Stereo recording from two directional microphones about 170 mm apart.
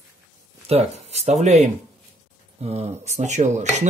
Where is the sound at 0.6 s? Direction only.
40° right (ahead or behind).